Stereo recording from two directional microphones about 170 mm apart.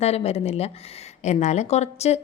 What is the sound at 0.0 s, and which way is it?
A woman's voice, 40° left (ahead or behind).